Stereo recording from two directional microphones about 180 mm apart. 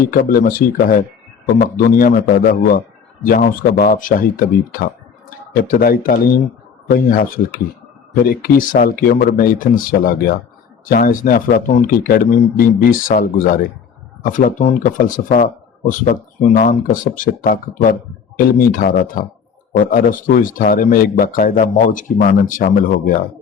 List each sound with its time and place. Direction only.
0.1 s speech: 50° left (ahead or behind)